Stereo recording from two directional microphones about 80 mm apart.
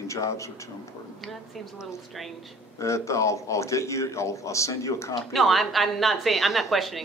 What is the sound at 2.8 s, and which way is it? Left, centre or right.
A man's voice, left.